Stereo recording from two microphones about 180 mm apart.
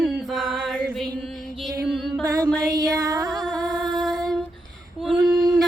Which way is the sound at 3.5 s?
20° right (ahead or behind).